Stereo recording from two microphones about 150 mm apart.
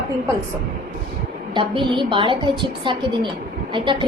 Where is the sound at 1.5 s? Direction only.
35° right (ahead or behind).